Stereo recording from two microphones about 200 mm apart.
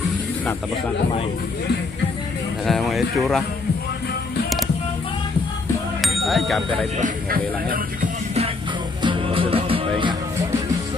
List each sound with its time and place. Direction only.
2.6 s speech: centre (ahead or behind)
5.9 s speech: centre (ahead or behind)
7.0 s speech: 45° right (ahead or behind)
9.0 s music: 25° right (ahead or behind)